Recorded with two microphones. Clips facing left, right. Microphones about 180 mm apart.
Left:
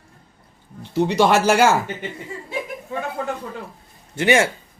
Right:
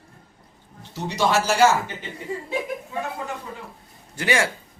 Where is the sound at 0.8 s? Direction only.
60° left (ahead or behind).